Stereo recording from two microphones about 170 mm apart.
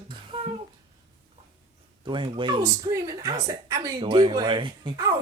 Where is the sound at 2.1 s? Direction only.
30° right (ahead or behind).